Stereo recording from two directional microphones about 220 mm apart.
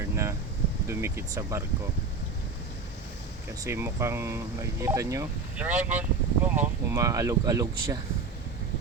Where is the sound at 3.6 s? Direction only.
10° right (ahead or behind).